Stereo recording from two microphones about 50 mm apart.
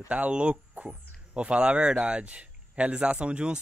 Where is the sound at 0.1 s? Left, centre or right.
Right.